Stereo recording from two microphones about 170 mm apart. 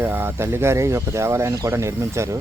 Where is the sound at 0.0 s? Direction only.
10° right (ahead or behind).